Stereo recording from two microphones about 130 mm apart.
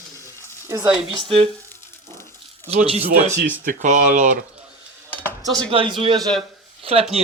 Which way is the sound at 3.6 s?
80° right.